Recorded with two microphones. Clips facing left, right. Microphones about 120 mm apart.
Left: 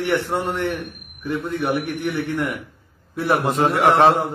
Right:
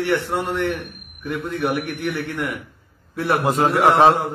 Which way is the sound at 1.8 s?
20° left (ahead or behind).